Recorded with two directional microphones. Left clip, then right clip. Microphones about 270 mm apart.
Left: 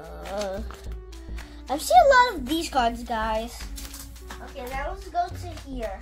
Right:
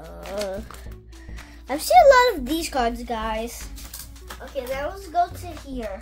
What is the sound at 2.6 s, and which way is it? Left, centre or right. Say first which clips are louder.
Music: left 1 dB; centre.